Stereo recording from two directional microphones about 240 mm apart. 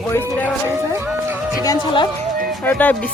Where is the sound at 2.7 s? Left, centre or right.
Centre.